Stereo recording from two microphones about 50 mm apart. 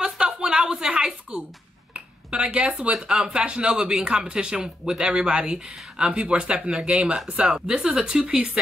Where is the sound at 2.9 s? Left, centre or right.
Centre.